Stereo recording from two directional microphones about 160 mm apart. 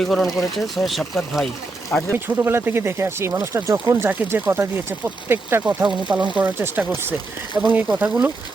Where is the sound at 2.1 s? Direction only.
15° right (ahead or behind).